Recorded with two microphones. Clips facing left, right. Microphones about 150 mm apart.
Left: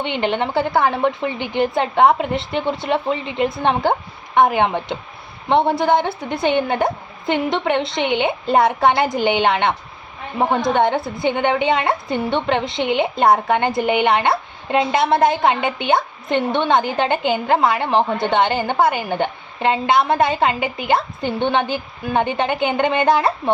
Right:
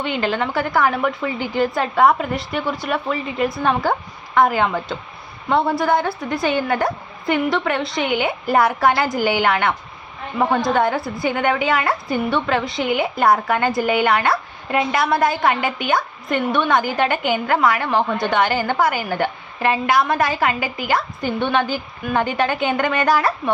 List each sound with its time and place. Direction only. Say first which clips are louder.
0.0 s a woman's voice: left 1 dB; 25° left (ahead or behind)